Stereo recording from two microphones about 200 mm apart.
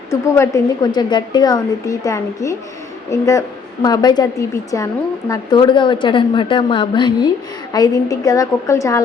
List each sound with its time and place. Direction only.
0.1 s a woman's voice: 15° left (ahead or behind)